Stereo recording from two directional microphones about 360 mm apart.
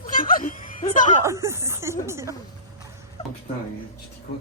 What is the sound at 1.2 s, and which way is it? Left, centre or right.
Speech, centre.